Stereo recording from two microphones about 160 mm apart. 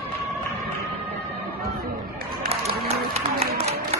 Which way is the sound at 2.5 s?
40° right (ahead or behind).